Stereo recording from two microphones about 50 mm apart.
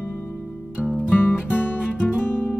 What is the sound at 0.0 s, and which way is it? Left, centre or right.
Music, left.